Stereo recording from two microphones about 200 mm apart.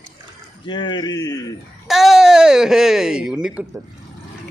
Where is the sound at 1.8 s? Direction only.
Centre (ahead or behind).